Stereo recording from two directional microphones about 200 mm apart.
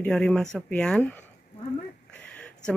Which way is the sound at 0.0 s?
5° left (ahead or behind).